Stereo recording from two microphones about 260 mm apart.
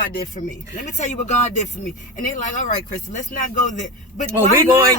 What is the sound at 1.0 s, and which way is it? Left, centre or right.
Speech, left.